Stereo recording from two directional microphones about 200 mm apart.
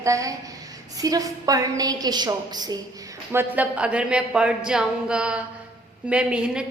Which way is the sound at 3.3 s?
10° right (ahead or behind).